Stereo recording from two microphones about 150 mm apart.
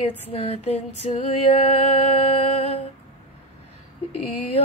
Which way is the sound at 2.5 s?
40° left (ahead or behind).